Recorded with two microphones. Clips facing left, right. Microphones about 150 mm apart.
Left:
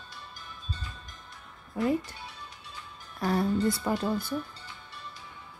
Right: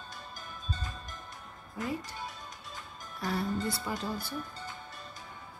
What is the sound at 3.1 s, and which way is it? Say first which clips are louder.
Speech: left 6 dB; 50° left (ahead or behind).